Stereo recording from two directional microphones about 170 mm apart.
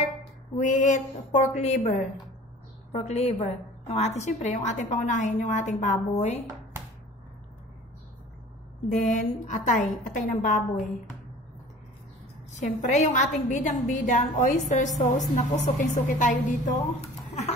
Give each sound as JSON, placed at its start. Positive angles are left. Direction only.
{"t": 0.6, "sound": "a woman's voice", "side_deg": 45}
{"t": 9.0, "sound": "a woman's voice", "side_deg": 45}
{"t": 12.5, "sound": "a woman's voice", "side_deg": 45}
{"t": 17.3, "sound": "laughter", "side_deg": 40}